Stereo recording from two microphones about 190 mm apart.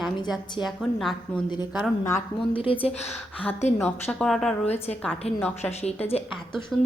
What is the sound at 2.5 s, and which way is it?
Speech, 30° left (ahead or behind).